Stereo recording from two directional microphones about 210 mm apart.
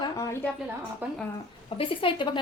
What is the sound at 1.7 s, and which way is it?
Speech, 25° left (ahead or behind).